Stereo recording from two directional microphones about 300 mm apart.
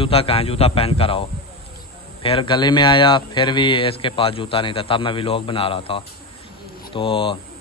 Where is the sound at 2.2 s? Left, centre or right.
Centre.